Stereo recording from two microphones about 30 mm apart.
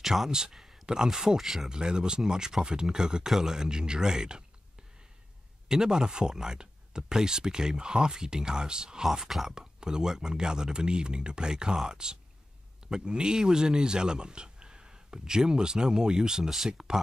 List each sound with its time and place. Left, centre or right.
0.0 s speech: centre
1.4 s speech: centre
1.7 s speech: right
5.7 s speech: right